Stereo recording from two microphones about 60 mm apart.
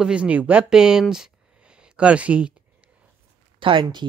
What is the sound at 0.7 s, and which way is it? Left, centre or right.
Speech, centre.